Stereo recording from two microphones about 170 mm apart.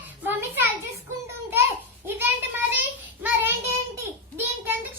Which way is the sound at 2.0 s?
10° right (ahead or behind).